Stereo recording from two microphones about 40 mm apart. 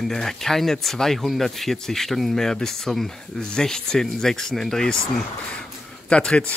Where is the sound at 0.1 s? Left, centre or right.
Centre.